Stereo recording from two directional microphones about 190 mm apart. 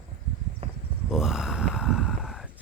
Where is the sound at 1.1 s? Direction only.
Centre (ahead or behind).